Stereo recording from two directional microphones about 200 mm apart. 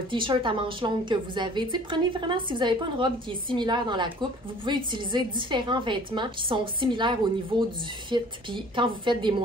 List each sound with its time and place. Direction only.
0.1 s a woman's voice: 25° right (ahead or behind)